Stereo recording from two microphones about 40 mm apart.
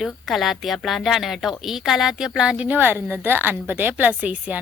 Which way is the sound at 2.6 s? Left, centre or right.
Right.